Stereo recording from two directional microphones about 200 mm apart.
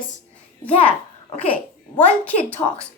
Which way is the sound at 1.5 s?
10° left (ahead or behind).